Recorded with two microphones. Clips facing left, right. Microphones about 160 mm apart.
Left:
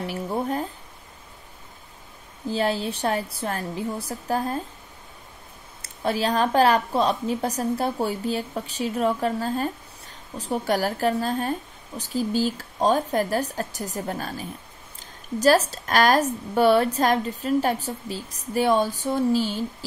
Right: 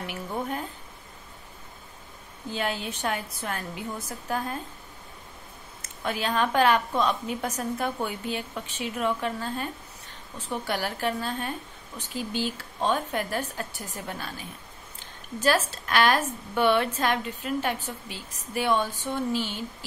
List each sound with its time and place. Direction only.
0.0 s a sound: 35° left (ahead or behind)
2.5 s speech: 35° left (ahead or behind)
5.8 s speech: 35° left (ahead or behind)